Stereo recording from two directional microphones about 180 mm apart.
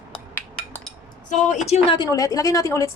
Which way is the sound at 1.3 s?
40° left (ahead or behind).